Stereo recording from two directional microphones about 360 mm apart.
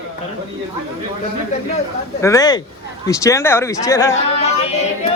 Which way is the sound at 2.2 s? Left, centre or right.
Centre.